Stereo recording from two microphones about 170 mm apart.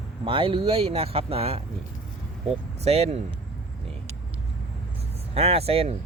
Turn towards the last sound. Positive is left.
turn(degrees=-35)  # may be behind; listen again after turning